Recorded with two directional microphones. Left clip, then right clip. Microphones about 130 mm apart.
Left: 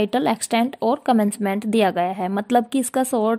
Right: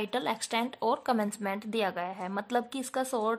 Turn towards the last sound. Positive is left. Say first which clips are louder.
# left 11 dB
turn(degrees=50)  # may be behind; listen again after turning